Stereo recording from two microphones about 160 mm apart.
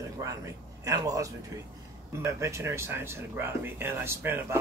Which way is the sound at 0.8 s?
20° right (ahead or behind).